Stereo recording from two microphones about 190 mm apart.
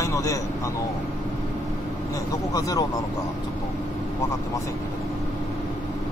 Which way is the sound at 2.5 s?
20° left (ahead or behind).